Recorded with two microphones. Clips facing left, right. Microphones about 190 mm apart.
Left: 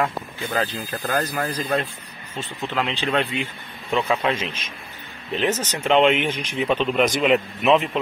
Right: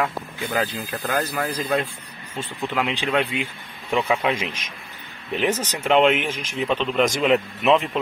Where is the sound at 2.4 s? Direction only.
10° right (ahead or behind).